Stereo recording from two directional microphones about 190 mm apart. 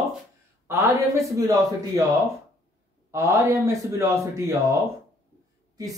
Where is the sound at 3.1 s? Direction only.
15° right (ahead or behind).